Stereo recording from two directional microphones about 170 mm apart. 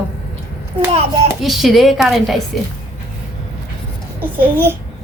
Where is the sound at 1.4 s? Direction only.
Centre (ahead or behind).